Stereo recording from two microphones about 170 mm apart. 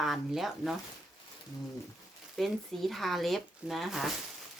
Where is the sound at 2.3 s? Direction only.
Centre (ahead or behind).